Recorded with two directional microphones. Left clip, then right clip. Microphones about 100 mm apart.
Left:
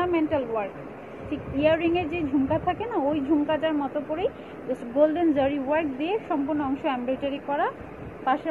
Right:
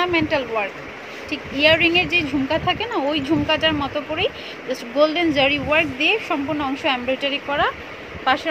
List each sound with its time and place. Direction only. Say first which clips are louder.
0.0 s speech: right 5 dB; 65° right (ahead or behind); by 7.7 s 90° right